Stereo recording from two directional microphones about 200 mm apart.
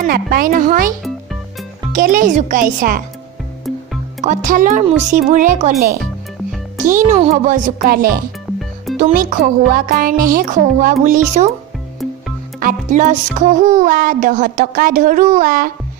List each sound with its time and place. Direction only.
0.0 s music: 45° right (ahead or behind)
1.0 s music: centre (ahead or behind)
1.9 s music: 45° right (ahead or behind)
4.2 s speech: 40° right (ahead or behind)
8.5 s music: centre (ahead or behind)
8.9 s music: 45° right (ahead or behind)
12.5 s music: 40° right (ahead or behind)